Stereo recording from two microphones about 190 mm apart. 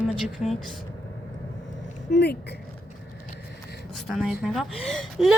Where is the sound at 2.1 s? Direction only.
60° left (ahead or behind).